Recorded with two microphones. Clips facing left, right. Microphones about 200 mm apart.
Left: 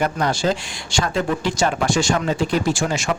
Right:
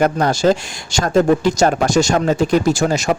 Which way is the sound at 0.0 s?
45° right (ahead or behind).